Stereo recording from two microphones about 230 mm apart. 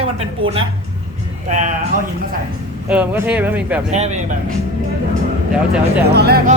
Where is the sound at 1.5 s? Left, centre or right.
Right.